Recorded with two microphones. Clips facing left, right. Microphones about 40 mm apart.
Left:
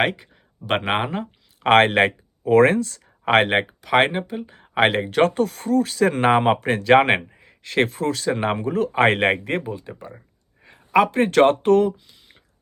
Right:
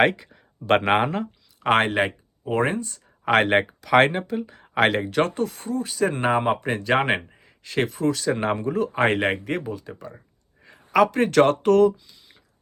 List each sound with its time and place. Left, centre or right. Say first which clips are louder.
0.0 s speech: right 2 dB; centre
1.6 s speech: left 5 dB; left
3.3 s speech: left 1 dB; left
3.7 s speech: right 1 dB; centre; by 9.6 s left
9.6 s speech: left 1 dB; left
10.9 s speech: left 1 dB; left